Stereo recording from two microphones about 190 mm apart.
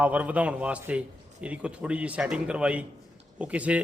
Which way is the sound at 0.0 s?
10° right (ahead or behind).